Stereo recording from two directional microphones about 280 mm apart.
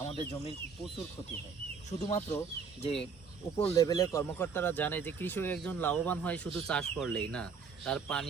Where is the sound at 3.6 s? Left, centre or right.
Centre.